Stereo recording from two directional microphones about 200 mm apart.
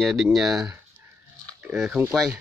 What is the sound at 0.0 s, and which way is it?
Speech, centre (ahead or behind).